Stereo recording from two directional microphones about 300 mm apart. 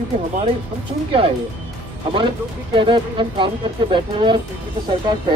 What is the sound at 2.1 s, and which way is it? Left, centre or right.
Speech, centre.